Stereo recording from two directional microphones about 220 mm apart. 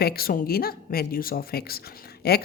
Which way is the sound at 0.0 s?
45° left (ahead or behind).